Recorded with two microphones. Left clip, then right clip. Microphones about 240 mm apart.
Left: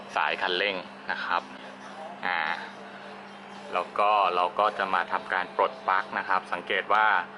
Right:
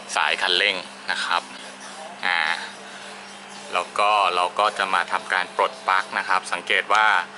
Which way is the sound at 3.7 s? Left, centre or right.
Centre.